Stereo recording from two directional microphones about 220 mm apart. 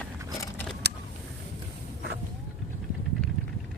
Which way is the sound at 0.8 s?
50° right (ahead or behind).